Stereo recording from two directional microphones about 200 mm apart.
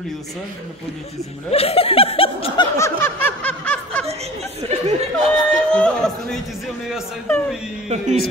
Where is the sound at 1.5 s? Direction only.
30° left (ahead or behind); by 4.0 s 5° left (ahead or behind).